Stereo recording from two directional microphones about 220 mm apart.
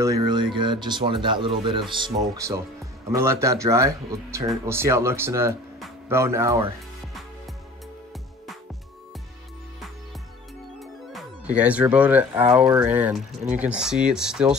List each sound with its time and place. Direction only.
0.0 s speech: 15° right (ahead or behind)
11.5 s speech: 5° right (ahead or behind)